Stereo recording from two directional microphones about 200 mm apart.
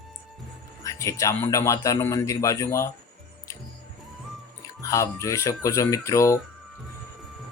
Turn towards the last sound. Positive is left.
turn(degrees=15)  # may be behind; listen again after turning